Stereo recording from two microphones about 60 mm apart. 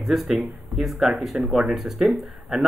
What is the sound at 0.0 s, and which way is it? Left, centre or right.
Speech, centre.